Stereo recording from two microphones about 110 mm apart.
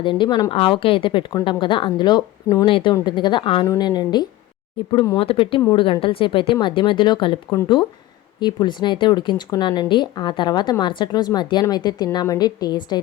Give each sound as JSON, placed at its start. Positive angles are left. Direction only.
{"t": 0.0, "sound": "speech", "side_deg": 45}
{"t": 2.6, "sound": "speech", "side_deg": 50}
{"t": 3.7, "sound": "a woman's voice", "side_deg": 40}
{"t": 5.1, "sound": "speech", "side_deg": 55}
{"t": 8.4, "sound": "a woman's voice", "side_deg": 40}